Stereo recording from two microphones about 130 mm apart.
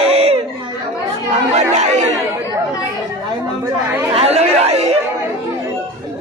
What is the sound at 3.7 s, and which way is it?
Speech, 20° right (ahead or behind).